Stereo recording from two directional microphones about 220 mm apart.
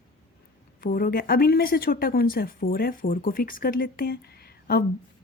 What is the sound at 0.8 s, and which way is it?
A woman's voice, 40° left (ahead or behind).